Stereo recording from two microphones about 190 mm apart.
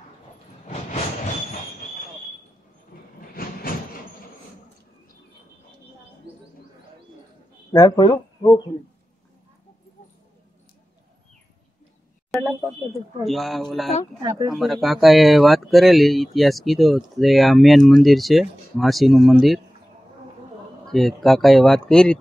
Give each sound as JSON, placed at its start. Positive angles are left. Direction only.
{"t": 3.3, "sound": "train", "side_deg": 50}
{"t": 7.7, "sound": "speech", "side_deg": 20}
{"t": 13.2, "sound": "speech", "side_deg": 0}
{"t": 14.2, "sound": "speech", "side_deg": -20}
{"t": 14.5, "sound": "speech", "side_deg": 0}
{"t": 20.9, "sound": "speech", "side_deg": 0}